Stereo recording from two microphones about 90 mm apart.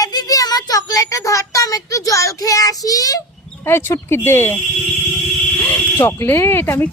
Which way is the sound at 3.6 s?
25° left (ahead or behind).